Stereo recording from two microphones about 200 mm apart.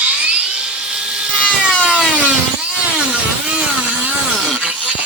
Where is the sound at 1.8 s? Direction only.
5° right (ahead or behind).